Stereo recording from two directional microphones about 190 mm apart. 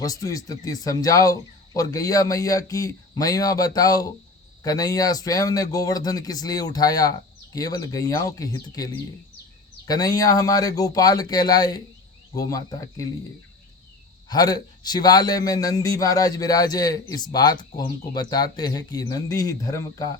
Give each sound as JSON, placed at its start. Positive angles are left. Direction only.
{"t": 0.0, "sound": "a man's voice", "side_deg": 20}
{"t": 14.3, "sound": "a man's voice", "side_deg": 20}